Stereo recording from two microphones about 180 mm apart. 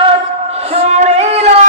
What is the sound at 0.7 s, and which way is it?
Singing, 40° right (ahead or behind).